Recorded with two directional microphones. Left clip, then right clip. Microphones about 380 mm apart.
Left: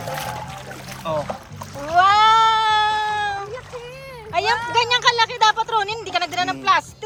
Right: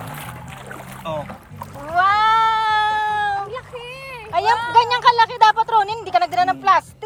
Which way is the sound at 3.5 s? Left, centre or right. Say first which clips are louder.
Right 2 dB; right.